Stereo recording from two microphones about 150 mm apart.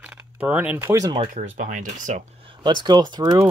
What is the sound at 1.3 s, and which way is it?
Speech, 60° right (ahead or behind).